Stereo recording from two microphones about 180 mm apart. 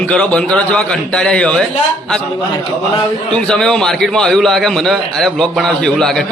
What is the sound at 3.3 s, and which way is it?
A man's voice, 5° left (ahead or behind).